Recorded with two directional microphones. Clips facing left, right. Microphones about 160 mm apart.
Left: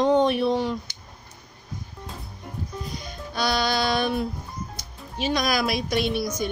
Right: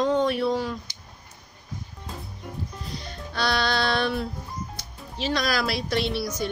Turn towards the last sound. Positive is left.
turn(degrees=15)  # may be behind; listen again after turning